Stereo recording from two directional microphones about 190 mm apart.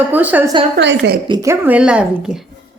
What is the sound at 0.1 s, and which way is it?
Speech, 10° right (ahead or behind).